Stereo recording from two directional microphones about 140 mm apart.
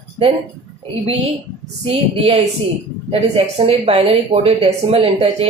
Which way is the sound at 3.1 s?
40° right (ahead or behind).